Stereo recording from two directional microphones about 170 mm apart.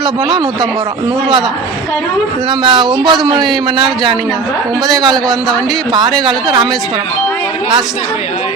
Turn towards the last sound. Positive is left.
turn(degrees=-25)  # may be behind; listen again after turning